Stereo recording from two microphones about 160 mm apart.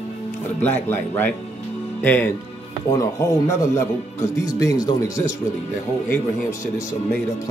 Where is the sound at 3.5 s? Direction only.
15° left (ahead or behind).